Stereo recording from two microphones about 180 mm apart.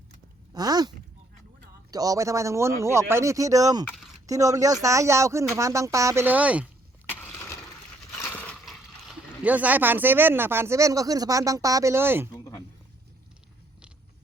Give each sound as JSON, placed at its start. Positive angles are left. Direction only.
{"t": 0.5, "sound": "speech", "side_deg": -20}
{"t": 7.1, "sound": "a sound", "side_deg": 10}
{"t": 8.1, "sound": "speech", "side_deg": 5}